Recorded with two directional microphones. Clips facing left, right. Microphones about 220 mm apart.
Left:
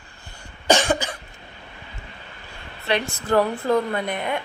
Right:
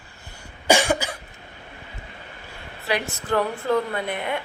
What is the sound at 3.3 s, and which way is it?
Speech, 45° left (ahead or behind).